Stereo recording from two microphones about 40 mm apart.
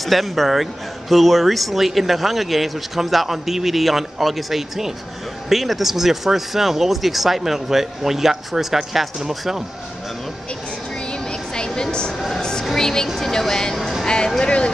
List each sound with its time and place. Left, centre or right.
0.0 s speech: centre
11.1 s vehicle: left
12.4 s speech: centre
13.7 s music: centre
14.0 s speech: left